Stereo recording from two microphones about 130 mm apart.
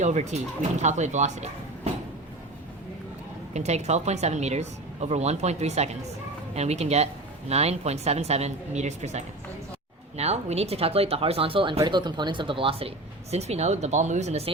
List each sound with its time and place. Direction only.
0.0 s speech: 65° right (ahead or behind)
3.5 s speech: 60° right (ahead or behind); by 12.9 s 45° right (ahead or behind)
13.3 s speech: 55° right (ahead or behind)